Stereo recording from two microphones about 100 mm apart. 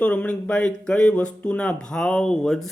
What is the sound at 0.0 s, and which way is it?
Speech, 15° left (ahead or behind).